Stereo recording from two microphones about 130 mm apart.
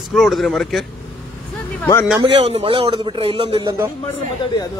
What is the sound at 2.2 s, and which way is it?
A man's voice, 45° right (ahead or behind).